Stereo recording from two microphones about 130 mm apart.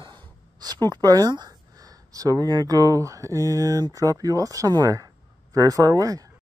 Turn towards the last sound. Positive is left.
turn(degrees=-25)  # may be behind; listen again after turning